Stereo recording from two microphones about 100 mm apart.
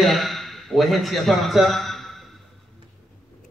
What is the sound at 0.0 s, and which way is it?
A man's voice, centre (ahead or behind).